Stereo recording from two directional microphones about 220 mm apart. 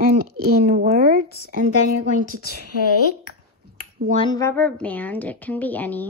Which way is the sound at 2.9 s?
90° left.